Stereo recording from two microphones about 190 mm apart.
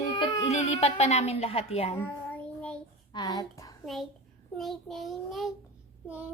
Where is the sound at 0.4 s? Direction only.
35° left (ahead or behind).